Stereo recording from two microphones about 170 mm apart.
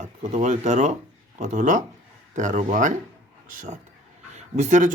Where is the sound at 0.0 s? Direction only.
45° right (ahead or behind).